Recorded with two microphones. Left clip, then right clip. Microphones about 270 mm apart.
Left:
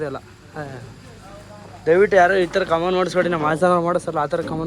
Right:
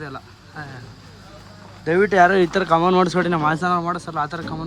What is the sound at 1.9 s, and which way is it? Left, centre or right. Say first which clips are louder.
Speech: left 1 dB; centre.